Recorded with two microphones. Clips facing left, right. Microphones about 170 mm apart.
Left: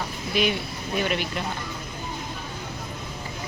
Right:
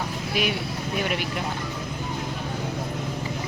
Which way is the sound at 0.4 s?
10° right (ahead or behind).